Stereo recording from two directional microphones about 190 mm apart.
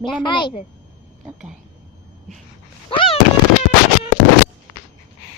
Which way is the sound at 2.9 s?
25° left (ahead or behind).